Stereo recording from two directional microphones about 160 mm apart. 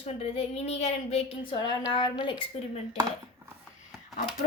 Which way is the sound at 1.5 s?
25° left (ahead or behind).